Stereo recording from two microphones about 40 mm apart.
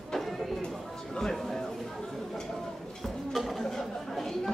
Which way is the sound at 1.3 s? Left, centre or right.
Centre.